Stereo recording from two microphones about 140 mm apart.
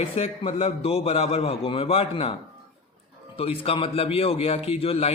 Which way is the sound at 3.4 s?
45° left (ahead or behind).